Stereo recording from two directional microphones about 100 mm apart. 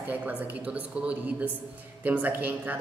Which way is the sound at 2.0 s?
15° right (ahead or behind).